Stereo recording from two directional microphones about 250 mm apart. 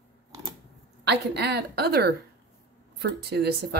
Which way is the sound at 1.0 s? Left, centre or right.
Right.